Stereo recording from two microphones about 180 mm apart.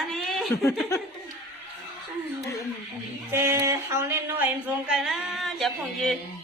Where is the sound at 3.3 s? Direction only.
15° right (ahead or behind).